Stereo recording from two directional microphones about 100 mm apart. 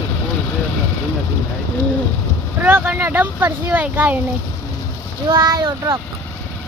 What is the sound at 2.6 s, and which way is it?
Speech, 20° right (ahead or behind).